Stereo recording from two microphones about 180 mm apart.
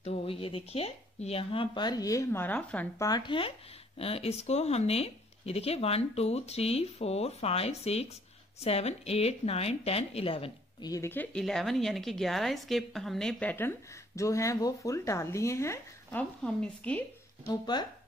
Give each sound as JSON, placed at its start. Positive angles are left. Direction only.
{"t": 0.0, "sound": "speech", "side_deg": 35}
{"t": 3.1, "sound": "speech", "side_deg": 25}
{"t": 10.9, "sound": "a woman's voice", "side_deg": 15}
{"t": 17.5, "sound": "speech", "side_deg": 25}